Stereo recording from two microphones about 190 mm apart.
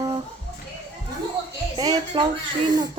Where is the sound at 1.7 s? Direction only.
20° right (ahead or behind).